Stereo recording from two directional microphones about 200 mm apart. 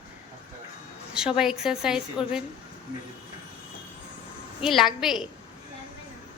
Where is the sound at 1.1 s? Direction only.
5° right (ahead or behind).